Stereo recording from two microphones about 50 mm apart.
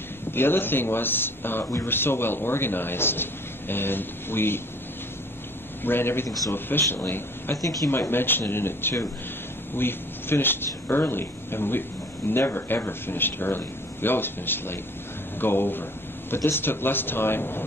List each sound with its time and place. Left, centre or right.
0.3 s a man's voice: left
5.9 s a man's voice: left
7.5 s speech: left
7.9 s a man's voice: left
9.8 s a man's voice: left